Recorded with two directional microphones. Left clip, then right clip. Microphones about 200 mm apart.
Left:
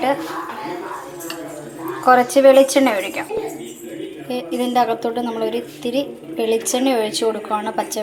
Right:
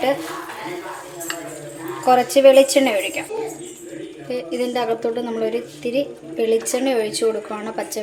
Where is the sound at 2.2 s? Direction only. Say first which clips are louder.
Right 1 dB; 5° right (ahead or behind).